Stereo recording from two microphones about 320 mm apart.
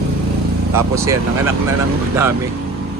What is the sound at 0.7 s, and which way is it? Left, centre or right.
Speech, centre.